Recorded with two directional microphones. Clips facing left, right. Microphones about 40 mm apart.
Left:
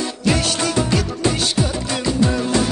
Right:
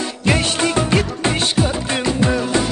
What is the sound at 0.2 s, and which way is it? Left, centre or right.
Music, right.